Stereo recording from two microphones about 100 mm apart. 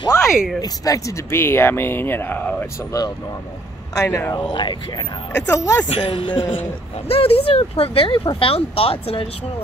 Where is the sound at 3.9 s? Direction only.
30° left (ahead or behind).